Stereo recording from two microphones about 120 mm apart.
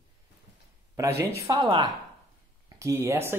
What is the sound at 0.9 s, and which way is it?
Speech, 25° right (ahead or behind).